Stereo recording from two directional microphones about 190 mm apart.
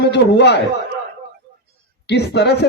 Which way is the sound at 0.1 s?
65° left (ahead or behind).